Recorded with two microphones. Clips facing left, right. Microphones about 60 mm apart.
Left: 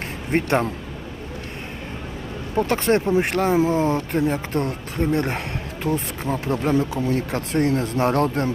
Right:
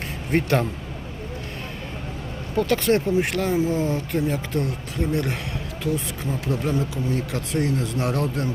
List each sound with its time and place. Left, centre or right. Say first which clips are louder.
0.3 s speech: left 1 dB; left
2.6 s speech: left 1 dB; left